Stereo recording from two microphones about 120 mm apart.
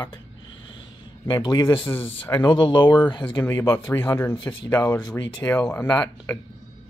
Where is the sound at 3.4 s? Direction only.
20° left (ahead or behind).